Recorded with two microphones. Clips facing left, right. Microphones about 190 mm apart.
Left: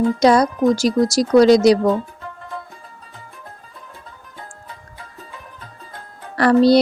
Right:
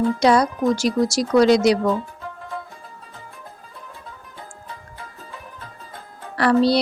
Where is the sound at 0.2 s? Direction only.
40° left (ahead or behind).